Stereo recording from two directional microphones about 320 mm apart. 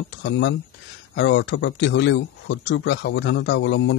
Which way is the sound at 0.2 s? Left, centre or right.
Left.